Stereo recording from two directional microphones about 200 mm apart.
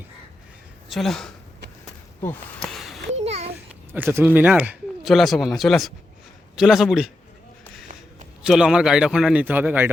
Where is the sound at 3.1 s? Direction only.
30° right (ahead or behind).